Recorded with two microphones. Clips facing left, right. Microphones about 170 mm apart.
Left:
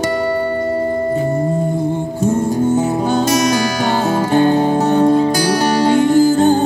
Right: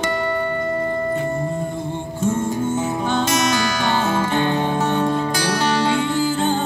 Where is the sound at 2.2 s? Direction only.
35° left (ahead or behind).